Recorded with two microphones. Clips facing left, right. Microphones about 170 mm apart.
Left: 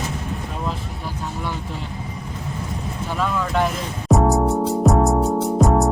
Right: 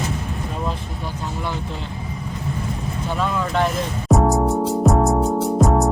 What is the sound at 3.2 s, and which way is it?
Speech, 5° left (ahead or behind).